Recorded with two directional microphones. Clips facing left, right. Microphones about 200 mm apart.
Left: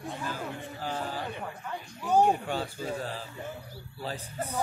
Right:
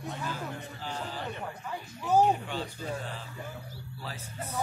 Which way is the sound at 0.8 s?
45° left (ahead or behind).